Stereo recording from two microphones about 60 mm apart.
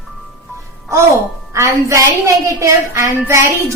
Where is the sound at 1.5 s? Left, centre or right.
Right.